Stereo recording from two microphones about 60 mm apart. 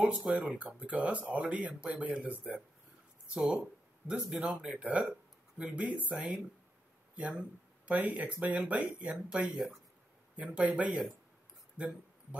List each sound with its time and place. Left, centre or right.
0.0 s speech: centre
4.5 s speech: centre
4.7 s speech: right
11.7 s a sound: right